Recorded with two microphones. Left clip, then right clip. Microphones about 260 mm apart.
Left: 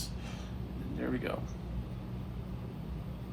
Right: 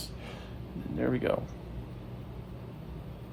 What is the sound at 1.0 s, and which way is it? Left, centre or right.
Speech, right.